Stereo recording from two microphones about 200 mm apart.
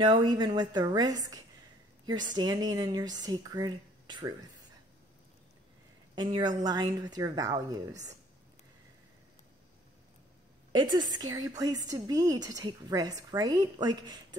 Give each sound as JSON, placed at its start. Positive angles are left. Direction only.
{"t": 0.0, "sound": "a woman's voice", "side_deg": -20}
{"t": 6.1, "sound": "a woman's voice", "side_deg": -20}
{"t": 10.7, "sound": "a woman's voice", "side_deg": -20}